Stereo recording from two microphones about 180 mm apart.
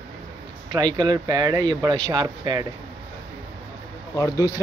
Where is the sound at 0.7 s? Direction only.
25° right (ahead or behind).